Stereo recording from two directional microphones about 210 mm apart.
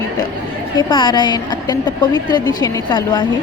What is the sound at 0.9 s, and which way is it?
A woman's voice, 20° left (ahead or behind).